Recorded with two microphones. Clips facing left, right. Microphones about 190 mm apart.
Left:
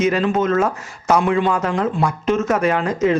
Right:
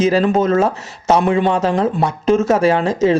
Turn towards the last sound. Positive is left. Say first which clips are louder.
# right 3 dB
turn(degrees=-25)  # may be behind; listen again after turning